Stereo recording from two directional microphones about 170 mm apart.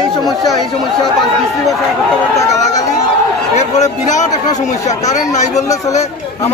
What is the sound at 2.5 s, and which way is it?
Crowd, 45° left (ahead or behind).